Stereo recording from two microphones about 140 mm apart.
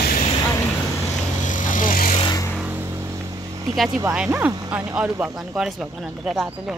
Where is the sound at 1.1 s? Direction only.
65° left (ahead or behind).